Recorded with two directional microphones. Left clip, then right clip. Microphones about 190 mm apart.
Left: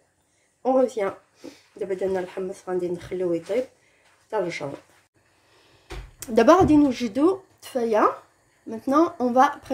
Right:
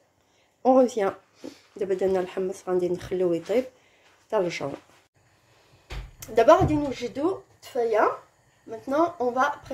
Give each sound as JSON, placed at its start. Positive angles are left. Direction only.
{"t": 0.6, "sound": "speech", "side_deg": -15}
{"t": 6.1, "sound": "speech", "side_deg": 45}